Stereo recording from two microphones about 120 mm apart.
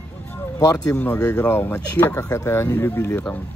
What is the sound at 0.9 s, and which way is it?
Speech, 15° left (ahead or behind).